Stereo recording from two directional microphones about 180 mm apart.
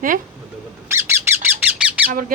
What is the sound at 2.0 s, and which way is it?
Squawk, 10° right (ahead or behind).